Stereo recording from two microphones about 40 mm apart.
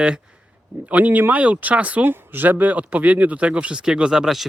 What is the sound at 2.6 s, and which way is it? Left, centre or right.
Speech, right.